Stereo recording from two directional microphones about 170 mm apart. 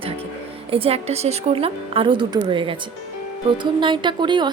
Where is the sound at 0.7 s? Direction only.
35° right (ahead or behind).